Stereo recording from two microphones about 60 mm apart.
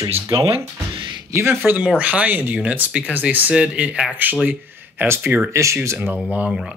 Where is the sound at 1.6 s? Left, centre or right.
Right.